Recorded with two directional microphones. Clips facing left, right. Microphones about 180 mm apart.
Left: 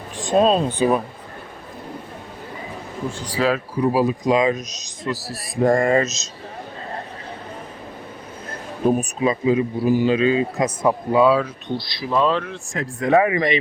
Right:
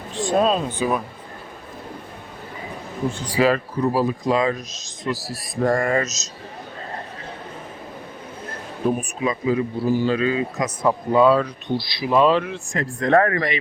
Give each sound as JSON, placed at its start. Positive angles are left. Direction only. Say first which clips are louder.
{"t": 0.2, "sound": "a sound", "louder": "left 2 dB", "side_deg": 20}
{"t": 0.4, "sound": "a man's voice", "louder": "left 4 dB", "side_deg": 30}
{"t": 3.4, "sound": "speech", "louder": "right 2 dB", "side_deg": -10}
{"t": 3.8, "sound": "speech", "louder": "left 2 dB", "side_deg": 10}
{"t": 5.0, "sound": "speech", "louder": "even", "side_deg": 0}
{"t": 5.5, "sound": "a man's voice", "louder": "left 3 dB", "side_deg": 20}
{"t": 9.2, "sound": "a man's voice", "louder": "left 2 dB", "side_deg": 25}
{"t": 10.8, "sound": "speech", "louder": "even", "side_deg": 5}
{"t": 11.8, "sound": "speech", "louder": "right 3 dB", "side_deg": -10}
{"t": 12.7, "sound": "speech", "louder": "even", "side_deg": 5}
{"t": 13.3, "sound": "a man's voice", "louder": "left 4 dB", "side_deg": 20}